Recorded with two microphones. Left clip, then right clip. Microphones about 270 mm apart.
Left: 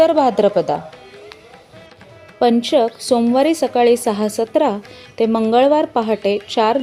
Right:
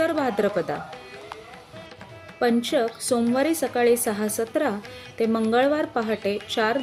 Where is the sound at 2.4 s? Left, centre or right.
Centre.